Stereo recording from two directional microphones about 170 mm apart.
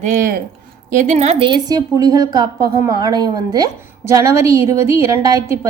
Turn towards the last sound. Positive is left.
turn(degrees=-20)  # may be behind; listen again after turning